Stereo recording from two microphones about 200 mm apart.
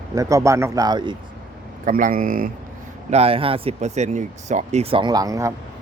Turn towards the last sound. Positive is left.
turn(degrees=-15)  # may be behind; listen again after turning